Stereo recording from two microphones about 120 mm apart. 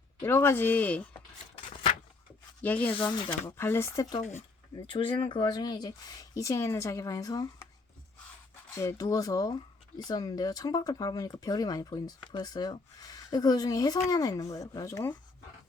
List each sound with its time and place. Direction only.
0.2 s speech: 20° left (ahead or behind)
1.5 s a sound: 75° left (ahead or behind)
2.6 s speech: 15° left (ahead or behind)
3.1 s speech: 40° left (ahead or behind)
3.4 s speech: 20° left (ahead or behind)
4.7 s speech: 45° left (ahead or behind)
8.7 s speech: 25° left (ahead or behind)